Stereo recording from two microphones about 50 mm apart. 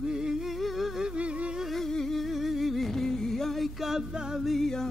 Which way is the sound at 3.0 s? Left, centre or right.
Centre.